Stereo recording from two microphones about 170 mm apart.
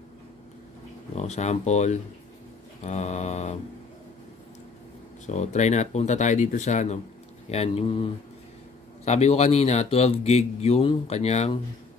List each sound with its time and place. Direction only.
1.1 s speech: 40° left (ahead or behind)
5.2 s speech: 45° left (ahead or behind)